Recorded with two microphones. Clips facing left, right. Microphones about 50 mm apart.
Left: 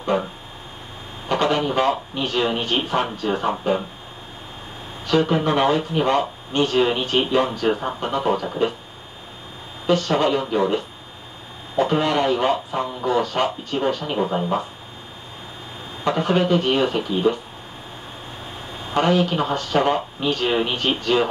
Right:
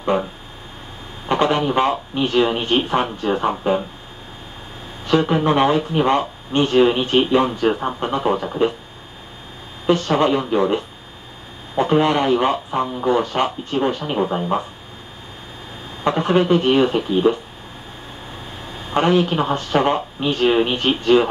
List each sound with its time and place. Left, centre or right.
1.3 s speech: right
2.3 s speech: centre
5.0 s speech: centre
9.8 s speech: right
11.9 s speech: right
16.0 s speech: right
18.9 s speech: right